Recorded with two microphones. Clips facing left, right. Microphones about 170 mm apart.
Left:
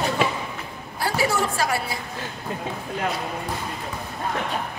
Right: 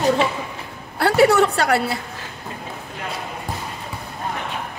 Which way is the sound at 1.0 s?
65° right (ahead or behind).